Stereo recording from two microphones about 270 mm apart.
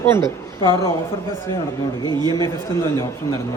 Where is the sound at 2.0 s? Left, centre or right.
Centre.